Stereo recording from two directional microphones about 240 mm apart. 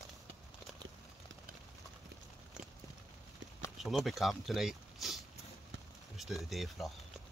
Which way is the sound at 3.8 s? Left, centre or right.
Centre.